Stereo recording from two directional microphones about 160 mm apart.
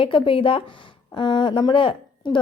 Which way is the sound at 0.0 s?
35° left (ahead or behind).